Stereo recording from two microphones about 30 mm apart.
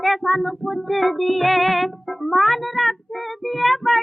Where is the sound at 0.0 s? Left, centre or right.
Centre.